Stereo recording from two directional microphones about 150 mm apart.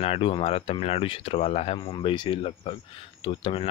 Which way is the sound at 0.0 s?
40° left (ahead or behind).